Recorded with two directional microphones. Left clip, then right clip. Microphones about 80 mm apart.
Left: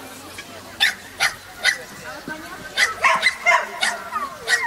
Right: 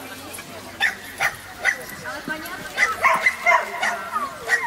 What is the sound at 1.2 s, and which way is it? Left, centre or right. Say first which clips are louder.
Dog: left 2 dB; left.